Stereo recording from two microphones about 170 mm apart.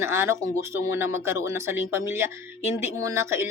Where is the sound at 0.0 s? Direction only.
15° right (ahead or behind).